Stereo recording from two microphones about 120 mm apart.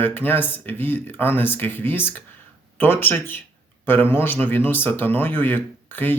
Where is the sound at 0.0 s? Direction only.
15° left (ahead or behind).